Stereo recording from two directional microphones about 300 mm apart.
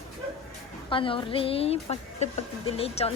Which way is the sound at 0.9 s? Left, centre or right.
Centre.